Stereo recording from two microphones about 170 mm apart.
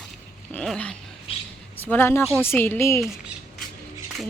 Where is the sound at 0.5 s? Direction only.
5° left (ahead or behind).